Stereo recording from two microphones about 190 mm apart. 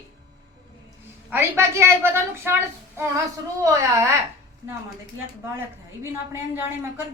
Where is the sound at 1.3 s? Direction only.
15° right (ahead or behind).